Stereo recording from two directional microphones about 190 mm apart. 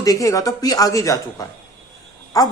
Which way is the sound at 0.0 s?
20° left (ahead or behind).